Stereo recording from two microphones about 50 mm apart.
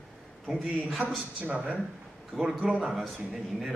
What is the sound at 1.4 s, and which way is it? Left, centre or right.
Speech, right.